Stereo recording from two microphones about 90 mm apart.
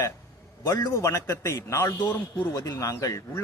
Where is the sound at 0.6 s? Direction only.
35° left (ahead or behind).